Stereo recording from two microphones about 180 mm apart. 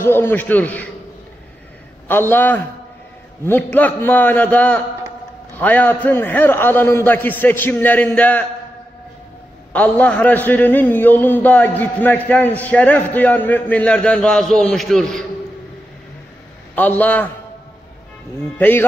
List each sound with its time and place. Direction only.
0.0 s a man's voice: 10° left (ahead or behind)
2.0 s a man's voice: 10° left (ahead or behind)
9.7 s a man's voice: 10° left (ahead or behind)
16.7 s a man's voice: 10° left (ahead or behind)
18.6 s a man's voice: 10° left (ahead or behind)